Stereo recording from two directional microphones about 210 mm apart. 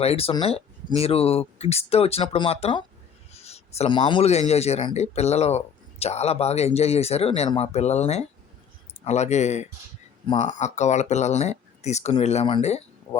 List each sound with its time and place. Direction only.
0.0 s speech: 30° left (ahead or behind)